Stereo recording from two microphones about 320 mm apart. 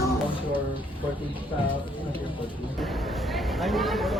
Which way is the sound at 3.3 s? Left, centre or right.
Centre.